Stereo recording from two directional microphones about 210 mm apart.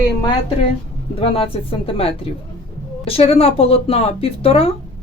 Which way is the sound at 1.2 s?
25° left (ahead or behind).